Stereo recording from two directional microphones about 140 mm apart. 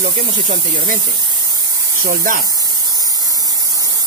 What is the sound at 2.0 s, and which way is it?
Speech, 90° right.